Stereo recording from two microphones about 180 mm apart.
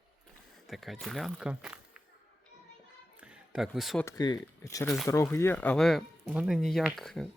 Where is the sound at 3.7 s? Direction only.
Centre (ahead or behind).